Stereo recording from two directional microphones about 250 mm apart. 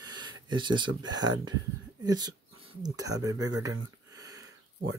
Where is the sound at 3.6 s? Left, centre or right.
Centre.